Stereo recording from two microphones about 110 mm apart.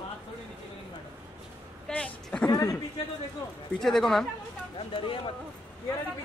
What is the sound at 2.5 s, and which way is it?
Speech, 30° left (ahead or behind).